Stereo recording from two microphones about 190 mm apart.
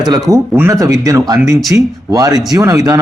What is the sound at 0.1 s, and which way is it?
Speech, 15° right (ahead or behind).